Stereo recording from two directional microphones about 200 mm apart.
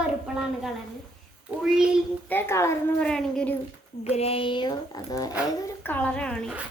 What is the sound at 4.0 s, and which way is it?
A woman's voice, 30° left (ahead or behind).